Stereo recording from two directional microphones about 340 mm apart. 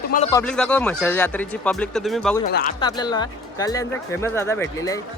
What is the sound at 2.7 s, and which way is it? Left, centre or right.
Speech, centre.